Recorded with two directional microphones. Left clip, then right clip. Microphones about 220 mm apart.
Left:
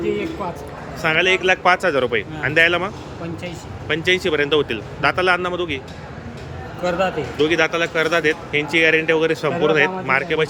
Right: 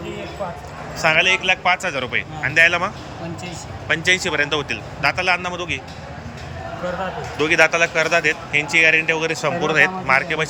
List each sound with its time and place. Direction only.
0.9 s speech: 10° left (ahead or behind)
6.8 s speech: 55° left (ahead or behind)
7.3 s speech: 5° left (ahead or behind)